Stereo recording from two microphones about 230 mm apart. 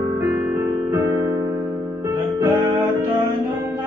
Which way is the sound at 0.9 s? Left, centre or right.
Centre.